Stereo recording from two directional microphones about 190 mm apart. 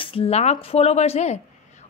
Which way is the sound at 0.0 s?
30° left (ahead or behind).